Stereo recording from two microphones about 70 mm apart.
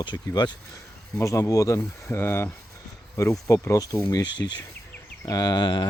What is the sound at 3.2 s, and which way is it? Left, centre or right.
Speech, left.